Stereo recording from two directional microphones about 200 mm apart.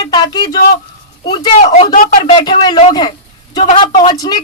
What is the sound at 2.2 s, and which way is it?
Speech, 25° left (ahead or behind).